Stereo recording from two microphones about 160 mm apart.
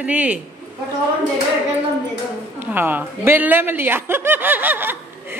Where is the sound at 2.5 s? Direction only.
10° right (ahead or behind).